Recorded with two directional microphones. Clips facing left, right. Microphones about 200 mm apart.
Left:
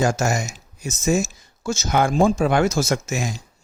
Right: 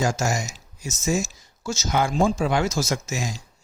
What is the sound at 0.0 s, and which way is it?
Speech, 60° left (ahead or behind).